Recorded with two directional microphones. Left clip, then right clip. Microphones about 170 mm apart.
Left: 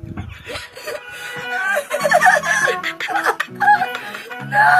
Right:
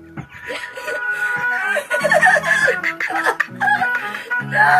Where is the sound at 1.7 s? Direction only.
70° left (ahead or behind).